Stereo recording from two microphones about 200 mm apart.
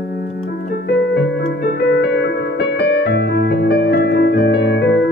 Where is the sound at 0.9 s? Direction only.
65° left (ahead or behind).